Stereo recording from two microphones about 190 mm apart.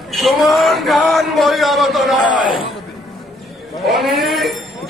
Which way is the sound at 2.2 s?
25° left (ahead or behind).